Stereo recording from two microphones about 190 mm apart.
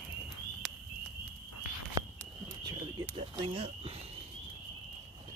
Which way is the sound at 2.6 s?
20° right (ahead or behind).